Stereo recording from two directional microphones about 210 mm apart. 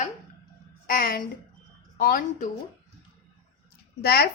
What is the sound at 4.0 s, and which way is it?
Speech, 50° left (ahead or behind).